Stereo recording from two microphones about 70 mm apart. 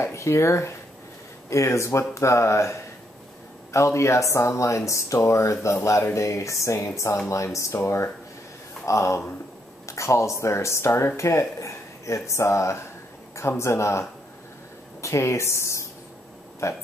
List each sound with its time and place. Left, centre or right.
0.0 s speech: left
3.7 s speech: left